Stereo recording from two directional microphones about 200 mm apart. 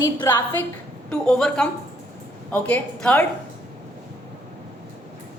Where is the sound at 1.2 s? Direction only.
5° left (ahead or behind).